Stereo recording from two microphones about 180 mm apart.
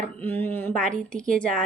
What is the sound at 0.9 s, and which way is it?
Speech, 45° right (ahead or behind).